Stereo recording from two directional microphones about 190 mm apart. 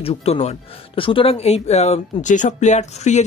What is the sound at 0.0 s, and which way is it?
Speech, 30° left (ahead or behind).